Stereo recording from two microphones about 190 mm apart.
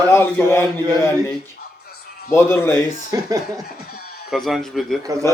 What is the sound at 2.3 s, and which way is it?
Speech, 15° left (ahead or behind).